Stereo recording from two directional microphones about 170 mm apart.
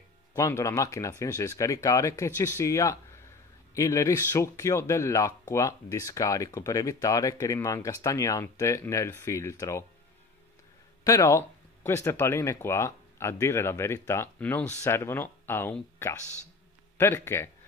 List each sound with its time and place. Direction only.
0.4 s speech: 15° left (ahead or behind)
11.1 s speech: 20° left (ahead or behind)